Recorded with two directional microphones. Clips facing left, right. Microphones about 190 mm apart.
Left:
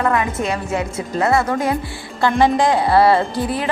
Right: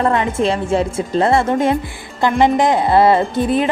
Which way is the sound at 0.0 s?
30° right (ahead or behind).